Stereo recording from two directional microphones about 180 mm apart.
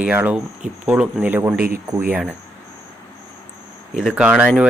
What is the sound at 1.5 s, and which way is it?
Speech, 55° right (ahead or behind).